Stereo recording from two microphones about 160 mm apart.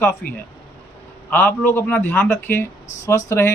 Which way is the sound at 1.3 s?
10° left (ahead or behind).